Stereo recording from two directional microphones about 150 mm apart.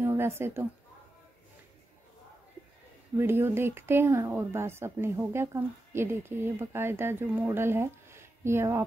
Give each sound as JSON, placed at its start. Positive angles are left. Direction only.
{"t": 0.0, "sound": "speech", "side_deg": -15}
{"t": 3.2, "sound": "speech", "side_deg": -15}